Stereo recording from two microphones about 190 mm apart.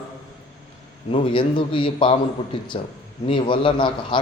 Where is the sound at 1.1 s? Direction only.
25° left (ahead or behind).